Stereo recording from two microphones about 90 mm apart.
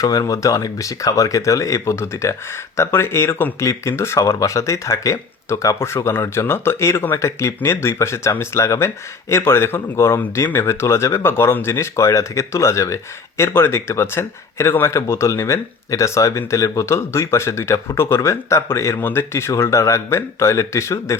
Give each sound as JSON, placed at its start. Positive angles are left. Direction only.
{"t": 0.0, "sound": "speech", "side_deg": 40}